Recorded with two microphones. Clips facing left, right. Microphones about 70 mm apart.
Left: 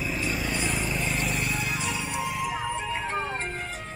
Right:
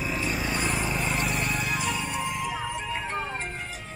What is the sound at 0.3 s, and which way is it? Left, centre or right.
Vehicle, right.